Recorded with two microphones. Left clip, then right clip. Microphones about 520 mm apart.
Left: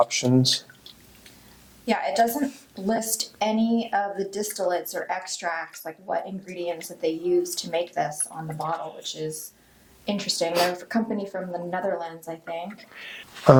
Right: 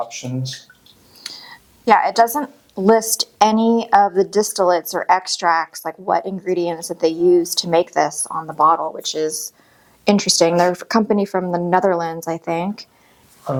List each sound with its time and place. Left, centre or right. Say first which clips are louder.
0.1 s speech: left 7 dB; left
1.8 s a woman's voice: right 9 dB; right